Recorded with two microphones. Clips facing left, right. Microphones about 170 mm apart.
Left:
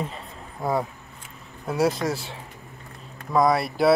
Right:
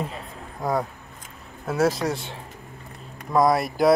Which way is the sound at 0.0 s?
Centre (ahead or behind).